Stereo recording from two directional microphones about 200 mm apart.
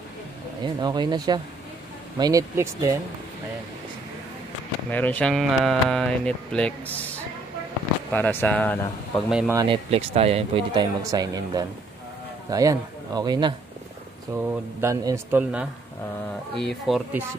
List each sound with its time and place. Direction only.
0.7 s speech: 20° right (ahead or behind)
4.9 s speech: 10° left (ahead or behind)
8.1 s a man's voice: 10° left (ahead or behind)
9.5 s speech: 20° right (ahead or behind)
9.8 s speech: 30° right (ahead or behind); by 17.2 s centre (ahead or behind)